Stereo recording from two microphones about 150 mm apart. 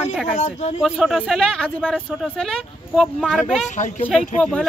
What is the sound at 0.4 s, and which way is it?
Speech, 45° left (ahead or behind).